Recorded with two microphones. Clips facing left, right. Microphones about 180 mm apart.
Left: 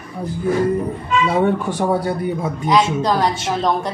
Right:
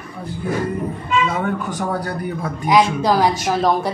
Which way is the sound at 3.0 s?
10° right (ahead or behind).